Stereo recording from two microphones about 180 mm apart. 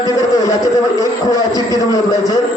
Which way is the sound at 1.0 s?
20° left (ahead or behind).